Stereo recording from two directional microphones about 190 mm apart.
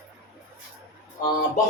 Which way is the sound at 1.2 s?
20° left (ahead or behind).